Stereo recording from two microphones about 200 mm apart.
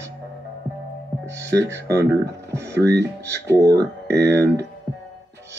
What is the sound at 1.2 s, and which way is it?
Music, 15° right (ahead or behind).